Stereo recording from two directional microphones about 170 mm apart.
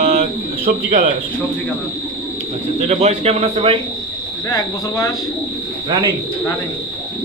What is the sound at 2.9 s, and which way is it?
Speech, 40° right (ahead or behind).